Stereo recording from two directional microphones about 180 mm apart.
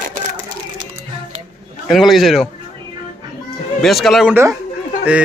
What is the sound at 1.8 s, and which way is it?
Speech, centre (ahead or behind).